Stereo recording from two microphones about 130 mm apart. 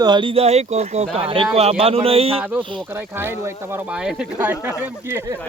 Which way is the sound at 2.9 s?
15° right (ahead or behind).